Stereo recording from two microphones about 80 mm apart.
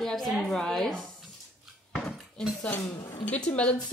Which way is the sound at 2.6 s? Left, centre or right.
Left.